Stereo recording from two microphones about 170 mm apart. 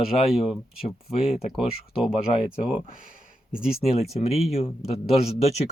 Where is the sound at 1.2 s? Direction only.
35° left (ahead or behind).